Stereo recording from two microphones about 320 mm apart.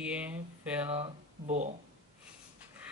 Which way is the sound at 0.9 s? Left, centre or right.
Right.